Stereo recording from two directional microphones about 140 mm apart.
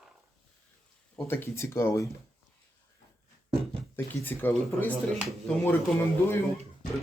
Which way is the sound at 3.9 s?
15° left (ahead or behind).